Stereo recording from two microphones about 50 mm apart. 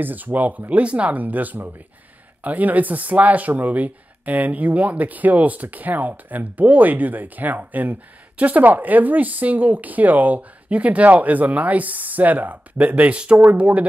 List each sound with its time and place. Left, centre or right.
0.0 s speech: right